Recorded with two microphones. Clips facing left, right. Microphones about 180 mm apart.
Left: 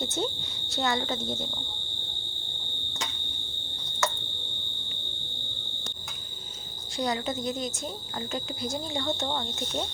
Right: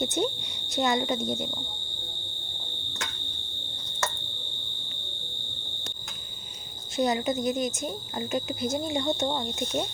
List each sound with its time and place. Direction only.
0.0 s speech: 20° right (ahead or behind)
6.9 s speech: 20° right (ahead or behind)